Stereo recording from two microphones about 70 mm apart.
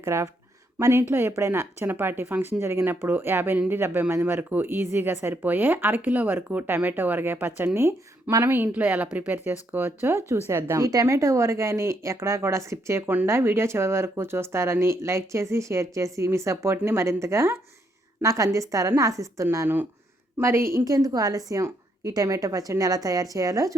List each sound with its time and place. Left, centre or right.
0.0 s a woman's voice: right
19.6 s speech: right
20.4 s speech: right
20.8 s speech: right